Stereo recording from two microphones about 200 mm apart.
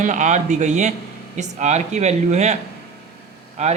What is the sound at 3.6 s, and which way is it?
Speech, 35° right (ahead or behind).